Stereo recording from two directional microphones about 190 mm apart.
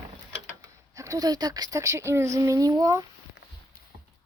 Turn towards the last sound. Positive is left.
turn(degrees=-20)  # may be behind; listen again after turning